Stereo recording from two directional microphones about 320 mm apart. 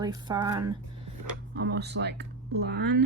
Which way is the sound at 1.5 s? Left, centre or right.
Right.